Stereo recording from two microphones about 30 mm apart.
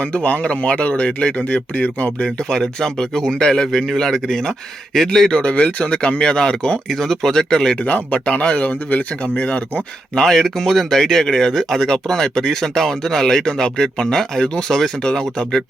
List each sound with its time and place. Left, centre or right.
0.0 s speech: left
3.2 s speech: left
3.8 s speech: centre
5.3 s speech: left
6.1 s speech: left
6.9 s speech: centre
8.1 s speech: left
10.2 s speech: centre